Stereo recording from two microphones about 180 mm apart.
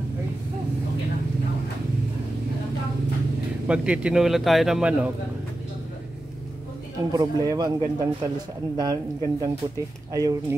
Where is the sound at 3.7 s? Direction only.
5° right (ahead or behind).